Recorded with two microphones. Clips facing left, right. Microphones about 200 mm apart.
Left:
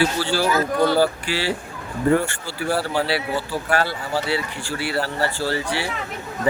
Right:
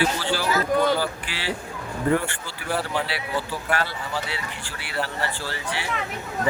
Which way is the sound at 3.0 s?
35° left (ahead or behind).